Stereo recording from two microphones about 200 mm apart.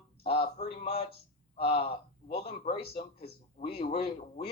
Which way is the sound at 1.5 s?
30° left (ahead or behind).